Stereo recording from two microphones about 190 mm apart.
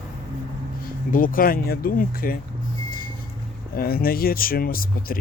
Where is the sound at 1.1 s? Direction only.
45° left (ahead or behind).